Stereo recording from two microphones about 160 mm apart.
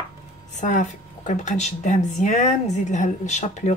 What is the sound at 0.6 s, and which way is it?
Speech, 50° left (ahead or behind).